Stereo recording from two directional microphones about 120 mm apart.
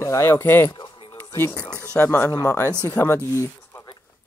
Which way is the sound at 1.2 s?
20° left (ahead or behind).